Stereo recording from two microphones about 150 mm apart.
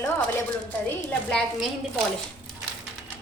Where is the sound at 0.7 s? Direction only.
10° left (ahead or behind).